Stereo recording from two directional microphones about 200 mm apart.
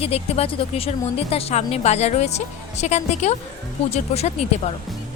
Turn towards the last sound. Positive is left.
turn(degrees=30)  # may be behind; listen again after turning